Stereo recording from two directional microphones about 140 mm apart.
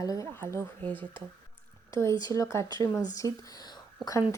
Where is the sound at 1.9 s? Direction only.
20° left (ahead or behind).